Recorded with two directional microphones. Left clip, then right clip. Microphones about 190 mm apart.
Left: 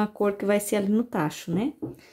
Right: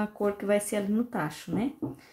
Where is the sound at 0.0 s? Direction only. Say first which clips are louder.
Left 4 dB; 55° left (ahead or behind).